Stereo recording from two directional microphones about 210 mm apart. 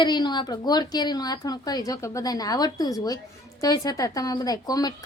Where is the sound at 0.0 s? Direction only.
20° left (ahead or behind).